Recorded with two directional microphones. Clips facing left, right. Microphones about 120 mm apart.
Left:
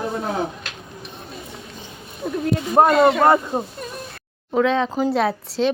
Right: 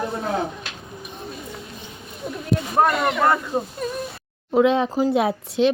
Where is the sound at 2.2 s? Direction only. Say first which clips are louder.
Left 5 dB; 75° left (ahead or behind).